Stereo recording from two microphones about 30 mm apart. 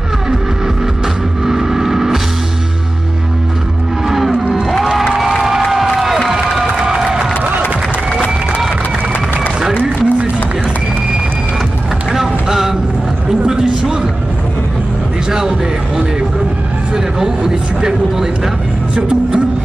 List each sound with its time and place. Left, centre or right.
1.4 s vehicle: centre
4.1 s music: centre
6.6 s crowd: right
9.8 s run: right
12.1 s a sound: centre
16.9 s vehicle: centre
18.9 s a sound: right